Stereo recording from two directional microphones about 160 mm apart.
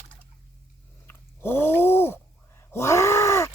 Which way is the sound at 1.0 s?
15° left (ahead or behind).